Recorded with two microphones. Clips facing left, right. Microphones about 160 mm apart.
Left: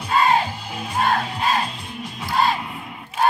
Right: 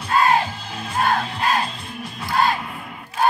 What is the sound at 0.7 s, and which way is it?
Music, 15° left (ahead or behind).